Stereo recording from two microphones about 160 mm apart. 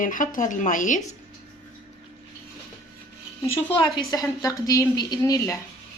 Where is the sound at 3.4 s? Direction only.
15° left (ahead or behind).